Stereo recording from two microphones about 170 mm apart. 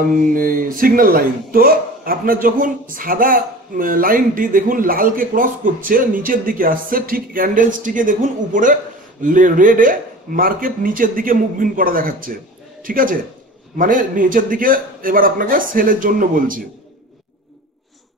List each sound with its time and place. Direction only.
0.3 s speech: 55° right (ahead or behind)